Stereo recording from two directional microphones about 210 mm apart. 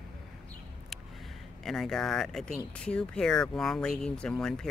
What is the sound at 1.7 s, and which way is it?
Speech, centre (ahead or behind).